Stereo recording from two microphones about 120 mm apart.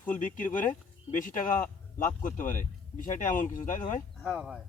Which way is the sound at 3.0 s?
90° left.